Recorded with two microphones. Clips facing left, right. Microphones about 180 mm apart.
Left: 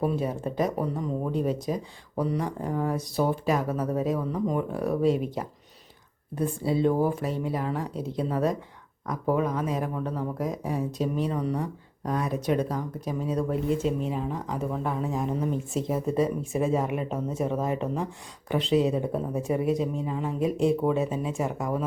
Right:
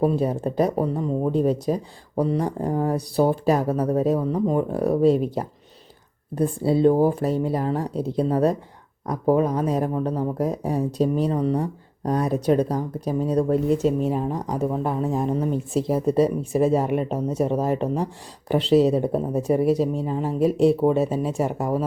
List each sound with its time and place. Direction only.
0.0 s speech: 35° right (ahead or behind)